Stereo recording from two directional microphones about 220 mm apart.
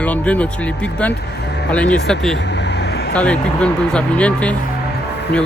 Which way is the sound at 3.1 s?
5° left (ahead or behind).